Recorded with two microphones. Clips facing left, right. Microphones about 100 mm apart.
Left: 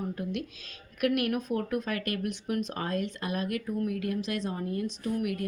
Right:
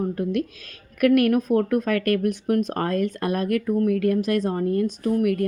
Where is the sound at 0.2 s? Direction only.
50° right (ahead or behind).